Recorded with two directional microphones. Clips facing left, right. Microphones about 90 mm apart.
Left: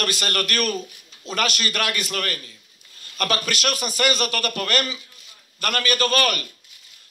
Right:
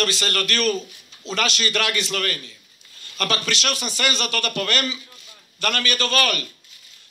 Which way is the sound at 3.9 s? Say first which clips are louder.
Left 2 dB; 40° left (ahead or behind).